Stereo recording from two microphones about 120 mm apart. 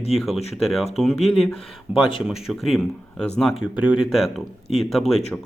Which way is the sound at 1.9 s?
10° right (ahead or behind).